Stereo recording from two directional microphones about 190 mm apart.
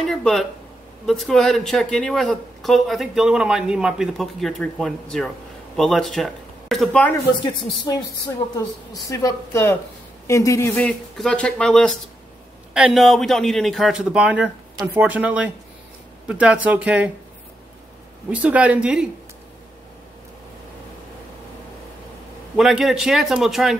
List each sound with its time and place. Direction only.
0.0 s speech: 5° left (ahead or behind)
8.9 s speech: 15° left (ahead or behind)
10.8 s speech: 5° left (ahead or behind)
18.3 s speech: 5° right (ahead or behind)
22.6 s speech: centre (ahead or behind)